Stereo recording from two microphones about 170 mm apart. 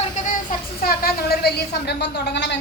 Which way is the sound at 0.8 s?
60° left (ahead or behind).